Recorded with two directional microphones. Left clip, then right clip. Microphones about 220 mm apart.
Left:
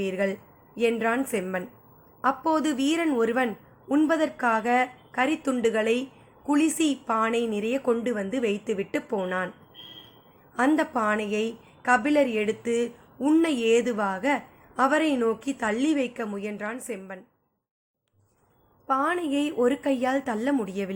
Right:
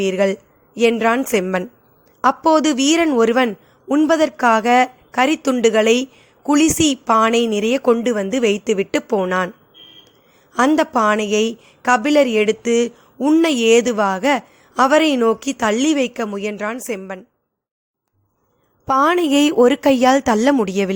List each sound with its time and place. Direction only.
0.0 s a woman's voice: 40° right (ahead or behind)
10.5 s speech: 45° right (ahead or behind)
18.9 s speech: 45° right (ahead or behind)